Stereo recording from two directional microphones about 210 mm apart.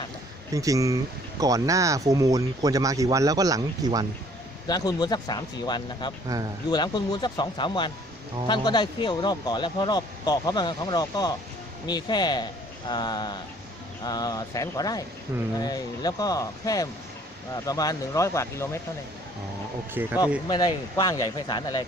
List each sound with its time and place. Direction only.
0.5 s speech: 15° right (ahead or behind)
4.7 s speech: 20° left (ahead or behind)
15.3 s speech: 10° right (ahead or behind)
15.6 s speech: 20° left (ahead or behind)
19.9 s speech: 10° right (ahead or behind)
20.5 s speech: 20° left (ahead or behind)